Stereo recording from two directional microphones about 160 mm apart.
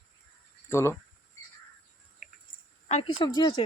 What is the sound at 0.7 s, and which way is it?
Speech, 15° left (ahead or behind).